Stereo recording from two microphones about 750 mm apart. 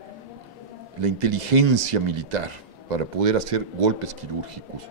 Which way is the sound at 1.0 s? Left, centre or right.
Right.